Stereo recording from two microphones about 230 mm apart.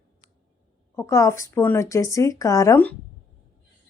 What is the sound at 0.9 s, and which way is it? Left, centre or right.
Speech, centre.